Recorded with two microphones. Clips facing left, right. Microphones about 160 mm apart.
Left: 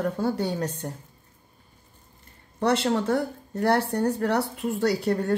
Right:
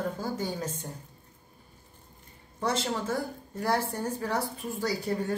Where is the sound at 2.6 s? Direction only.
65° left (ahead or behind).